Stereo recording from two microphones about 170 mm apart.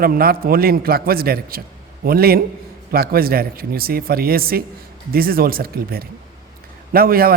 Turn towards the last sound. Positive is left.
turn(degrees=-60)  # may be behind; listen again after turning